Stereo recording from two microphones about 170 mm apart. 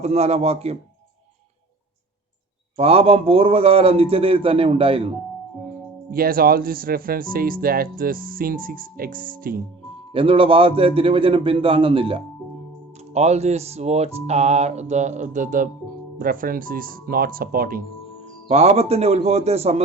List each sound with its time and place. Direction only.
0.0 s music: 40° right (ahead or behind)
2.7 s music: 35° right (ahead or behind)
6.1 s speech: 60° right (ahead or behind)
10.1 s music: 30° right (ahead or behind); by 15.7 s 50° right (ahead or behind)
16.1 s speech: 55° right (ahead or behind)
18.4 s music: 40° right (ahead or behind)